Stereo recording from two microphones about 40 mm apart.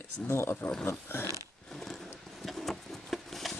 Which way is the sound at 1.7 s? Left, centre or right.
Centre.